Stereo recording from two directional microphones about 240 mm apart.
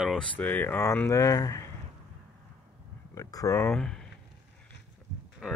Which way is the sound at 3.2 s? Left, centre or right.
Centre.